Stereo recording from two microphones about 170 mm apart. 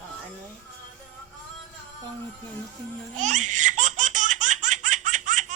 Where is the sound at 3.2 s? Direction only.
45° right (ahead or behind).